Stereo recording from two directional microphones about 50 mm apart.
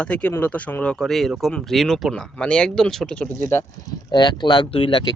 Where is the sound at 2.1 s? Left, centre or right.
Centre.